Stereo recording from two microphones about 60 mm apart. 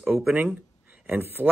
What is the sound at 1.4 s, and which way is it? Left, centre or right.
Speech, right.